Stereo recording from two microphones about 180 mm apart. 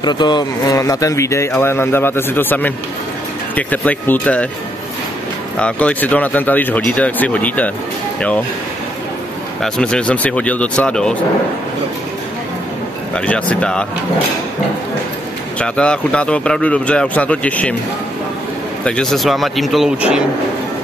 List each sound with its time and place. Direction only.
0.0 s speech: 25° left (ahead or behind); by 4.5 s 10° left (ahead or behind)
5.6 s speech: 5° left (ahead or behind)
9.6 s speech: 5° left (ahead or behind)
13.1 s speech: 5° left (ahead or behind)
15.6 s speech: 5° left (ahead or behind)
18.9 s speech: 5° left (ahead or behind)